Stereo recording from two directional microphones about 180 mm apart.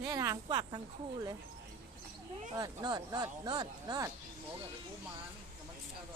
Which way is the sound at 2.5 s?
20° right (ahead or behind).